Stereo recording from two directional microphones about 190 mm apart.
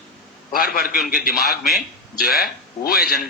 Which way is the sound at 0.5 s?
50° left (ahead or behind).